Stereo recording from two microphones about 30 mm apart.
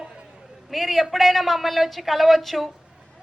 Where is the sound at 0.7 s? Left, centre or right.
Centre.